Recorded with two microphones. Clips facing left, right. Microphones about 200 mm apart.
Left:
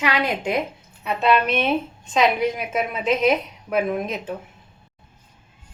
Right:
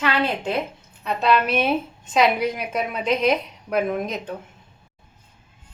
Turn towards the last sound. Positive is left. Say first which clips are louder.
# even
turn(degrees=0)  # may be behind; listen again after turning